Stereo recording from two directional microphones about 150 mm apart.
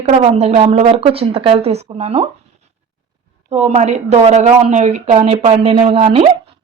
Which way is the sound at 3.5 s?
50° right (ahead or behind).